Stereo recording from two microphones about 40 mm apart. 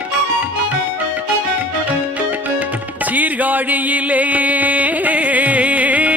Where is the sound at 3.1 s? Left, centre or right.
Right.